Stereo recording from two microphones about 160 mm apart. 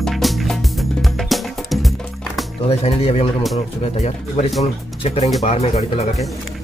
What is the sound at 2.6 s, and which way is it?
Speech, 40° left (ahead or behind).